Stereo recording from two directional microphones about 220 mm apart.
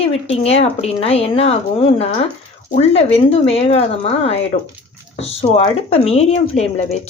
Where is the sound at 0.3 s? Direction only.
25° left (ahead or behind).